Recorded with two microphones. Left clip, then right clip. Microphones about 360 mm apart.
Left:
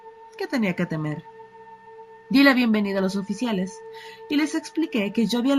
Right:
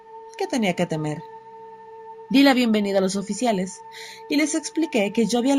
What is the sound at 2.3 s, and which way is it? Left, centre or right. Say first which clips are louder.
A woman's voice: even; centre.